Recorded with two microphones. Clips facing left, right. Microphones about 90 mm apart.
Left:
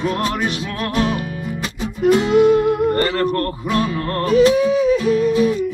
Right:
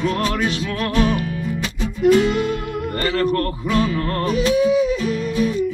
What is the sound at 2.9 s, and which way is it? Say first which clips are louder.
Speech: left 3 dB; 40° left (ahead or behind).